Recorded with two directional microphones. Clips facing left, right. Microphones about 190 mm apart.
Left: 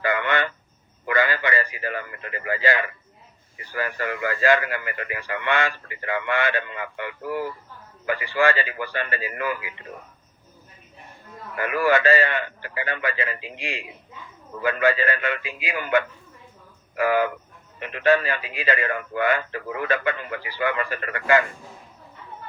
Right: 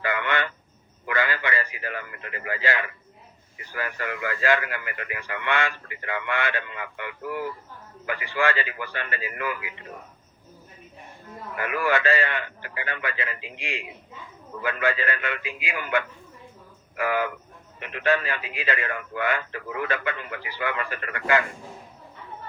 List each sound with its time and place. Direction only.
0.0 s a sound: 40° left (ahead or behind)
1.0 s a man's voice: 35° left (ahead or behind)
11.6 s a man's voice: 35° left (ahead or behind)